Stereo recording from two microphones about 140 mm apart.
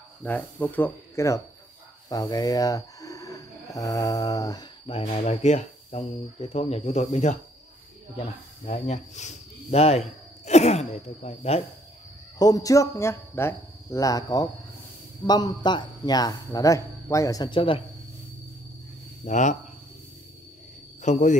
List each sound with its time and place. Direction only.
0.2 s speech: 10° left (ahead or behind); by 4.6 s 30° left (ahead or behind)
4.8 s speech: 45° left (ahead or behind)
8.6 s speech: 60° left (ahead or behind)
12.4 s a man's voice: 25° left (ahead or behind)
19.2 s speech: 60° left (ahead or behind)
21.0 s a man's voice: 60° left (ahead or behind)